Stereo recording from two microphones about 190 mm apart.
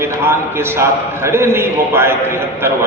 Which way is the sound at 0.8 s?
15° right (ahead or behind).